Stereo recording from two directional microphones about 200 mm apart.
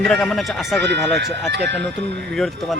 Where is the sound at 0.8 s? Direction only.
60° right (ahead or behind).